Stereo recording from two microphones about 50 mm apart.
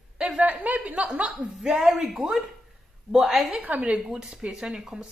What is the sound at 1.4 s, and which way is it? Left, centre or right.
Speech, centre.